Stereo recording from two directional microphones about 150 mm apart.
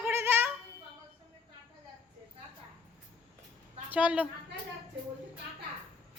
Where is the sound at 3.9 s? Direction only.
10° right (ahead or behind).